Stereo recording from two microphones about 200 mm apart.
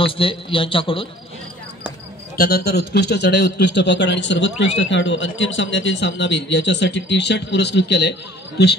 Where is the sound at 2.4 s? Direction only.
50° left (ahead or behind).